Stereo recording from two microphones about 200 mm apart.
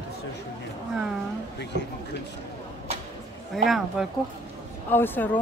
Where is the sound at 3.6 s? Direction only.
Centre (ahead or behind).